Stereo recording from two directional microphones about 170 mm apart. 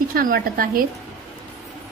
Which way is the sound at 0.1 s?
55° right (ahead or behind).